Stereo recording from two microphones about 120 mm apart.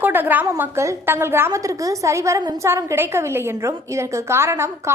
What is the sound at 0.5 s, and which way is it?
A woman's voice, 25° right (ahead or behind).